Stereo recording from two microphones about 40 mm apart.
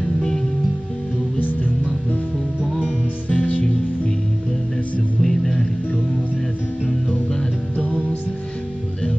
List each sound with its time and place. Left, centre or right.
1.4 s music: left
2.8 s music: left
5.2 s music: centre